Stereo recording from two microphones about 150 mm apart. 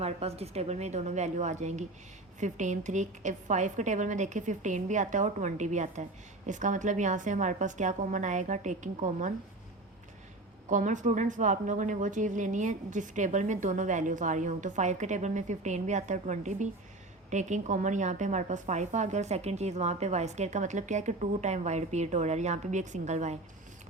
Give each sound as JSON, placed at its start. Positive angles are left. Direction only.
{"t": 0.0, "sound": "a woman's voice", "side_deg": -45}
{"t": 10.7, "sound": "a woman's voice", "side_deg": -55}